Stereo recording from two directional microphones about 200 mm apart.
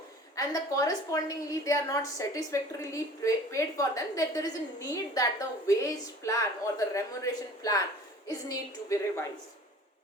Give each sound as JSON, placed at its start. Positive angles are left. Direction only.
{"t": 0.3, "sound": "a woman's voice", "side_deg": 15}